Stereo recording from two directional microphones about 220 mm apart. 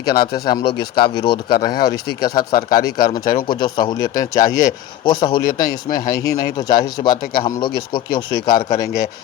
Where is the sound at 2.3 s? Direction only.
40° left (ahead or behind).